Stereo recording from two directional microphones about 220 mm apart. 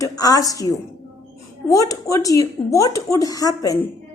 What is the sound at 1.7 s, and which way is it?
Speech, 15° left (ahead or behind).